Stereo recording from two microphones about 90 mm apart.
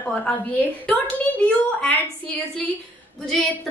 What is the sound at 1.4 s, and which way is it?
Speech, 15° left (ahead or behind).